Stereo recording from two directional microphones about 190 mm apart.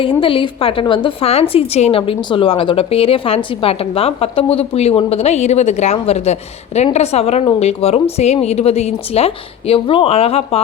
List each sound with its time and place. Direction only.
0.0 s a woman's voice: 25° left (ahead or behind)